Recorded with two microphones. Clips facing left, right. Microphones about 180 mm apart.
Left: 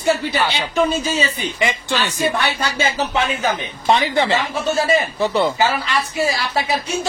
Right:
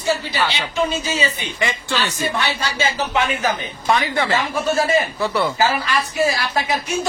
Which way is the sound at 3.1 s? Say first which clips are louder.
Even; 25° left (ahead or behind).